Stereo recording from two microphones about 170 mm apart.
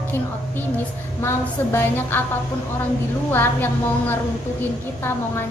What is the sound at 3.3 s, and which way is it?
A woman's voice, 10° left (ahead or behind).